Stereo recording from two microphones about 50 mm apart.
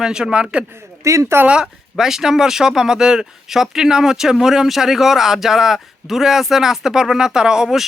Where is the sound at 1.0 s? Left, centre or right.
Right.